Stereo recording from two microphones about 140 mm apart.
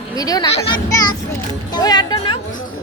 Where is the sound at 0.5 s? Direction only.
35° left (ahead or behind).